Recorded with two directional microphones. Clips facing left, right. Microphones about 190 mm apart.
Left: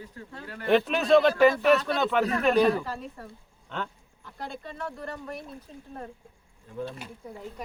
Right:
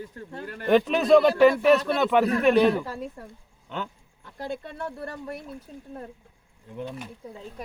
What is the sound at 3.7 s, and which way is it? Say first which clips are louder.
Speech: right 1 dB; 5° right (ahead or behind).